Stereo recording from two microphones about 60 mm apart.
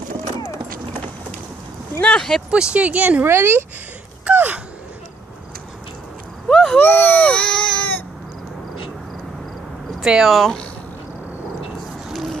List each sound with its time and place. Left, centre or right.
2.1 s speech: centre
2.5 s speech: centre
3.3 s speech: right
4.3 s gasp: right
6.5 s a sound: centre
6.8 s speech: left
7.2 s speech: centre
9.9 s speech: centre
12.1 s a sound: centre